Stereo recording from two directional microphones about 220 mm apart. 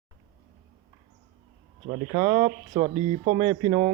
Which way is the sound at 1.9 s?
25° right (ahead or behind).